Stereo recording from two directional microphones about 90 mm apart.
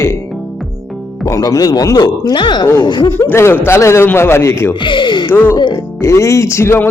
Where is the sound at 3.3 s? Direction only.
30° left (ahead or behind).